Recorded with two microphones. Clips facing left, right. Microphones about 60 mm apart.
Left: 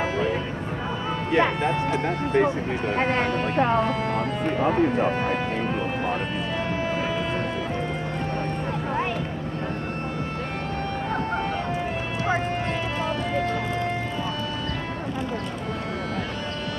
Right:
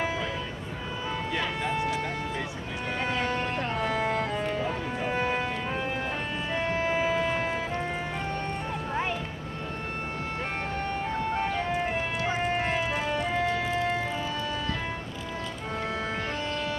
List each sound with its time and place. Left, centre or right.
1.3 s speech: left
3.9 s music: centre
4.5 s speech: left
4.7 s speech: left
12.5 s vehicle: centre